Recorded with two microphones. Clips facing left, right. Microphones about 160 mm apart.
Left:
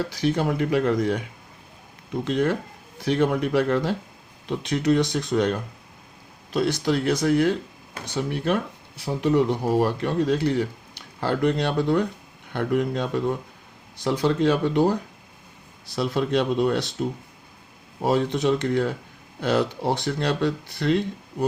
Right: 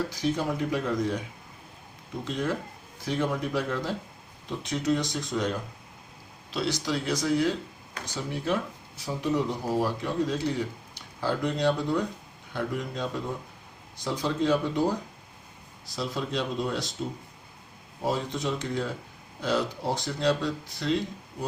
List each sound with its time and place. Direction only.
0.1 s speech: 70° left (ahead or behind)
2.2 s speech: 65° left (ahead or behind)
6.5 s speech: 50° left (ahead or behind)
18.0 s speech: 70° left (ahead or behind)